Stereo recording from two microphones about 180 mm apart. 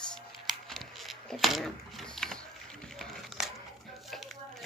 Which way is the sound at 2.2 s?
5° left (ahead or behind).